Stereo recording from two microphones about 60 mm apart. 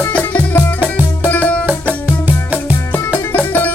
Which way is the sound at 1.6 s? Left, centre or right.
Right.